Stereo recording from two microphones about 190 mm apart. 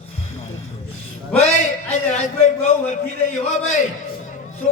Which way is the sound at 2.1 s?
40° left (ahead or behind).